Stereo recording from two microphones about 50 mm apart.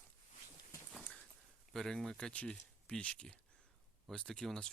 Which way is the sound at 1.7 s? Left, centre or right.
Centre.